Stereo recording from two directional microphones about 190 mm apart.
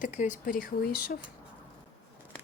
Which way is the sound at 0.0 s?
40° left (ahead or behind).